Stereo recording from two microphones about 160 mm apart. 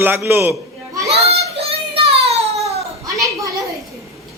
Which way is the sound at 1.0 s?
40° right (ahead or behind).